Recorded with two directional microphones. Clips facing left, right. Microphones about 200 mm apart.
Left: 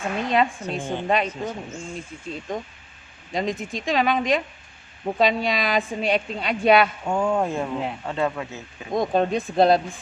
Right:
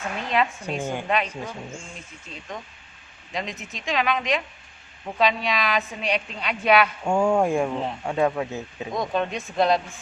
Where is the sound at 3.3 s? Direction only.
50° left (ahead or behind).